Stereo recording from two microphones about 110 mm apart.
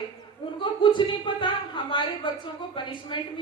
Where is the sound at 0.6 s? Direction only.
50° left (ahead or behind).